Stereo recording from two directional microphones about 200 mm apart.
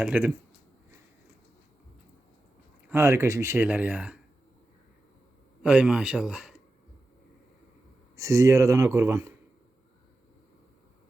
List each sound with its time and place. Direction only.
0.0 s speech: 5° right (ahead or behind)
2.9 s speech: 10° right (ahead or behind)
5.6 s a man's voice: 5° right (ahead or behind)
8.1 s speech: 15° right (ahead or behind)